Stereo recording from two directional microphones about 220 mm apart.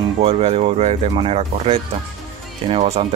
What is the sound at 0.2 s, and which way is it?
Speech, 25° right (ahead or behind).